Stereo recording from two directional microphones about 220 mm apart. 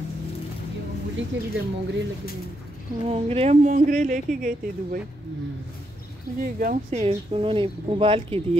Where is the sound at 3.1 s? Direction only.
25° right (ahead or behind).